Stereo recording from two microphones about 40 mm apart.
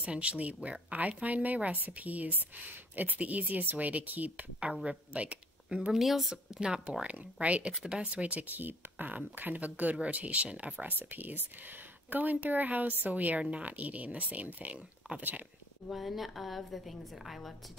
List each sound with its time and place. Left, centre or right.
0.0 s speech: right
3.2 s speech: right
5.8 s speech: centre
6.3 s speech: right
7.0 s speech: right
7.7 s speech: centre
8.0 s speech: right
13.4 s speech: right
13.7 s speech: right
15.9 s a woman's voice: centre